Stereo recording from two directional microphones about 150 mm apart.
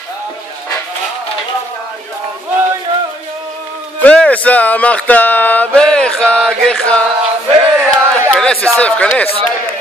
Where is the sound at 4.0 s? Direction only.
10° left (ahead or behind).